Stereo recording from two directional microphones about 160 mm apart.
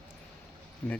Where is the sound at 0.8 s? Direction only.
10° left (ahead or behind).